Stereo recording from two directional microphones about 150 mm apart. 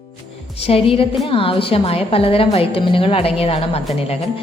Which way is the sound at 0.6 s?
40° left (ahead or behind).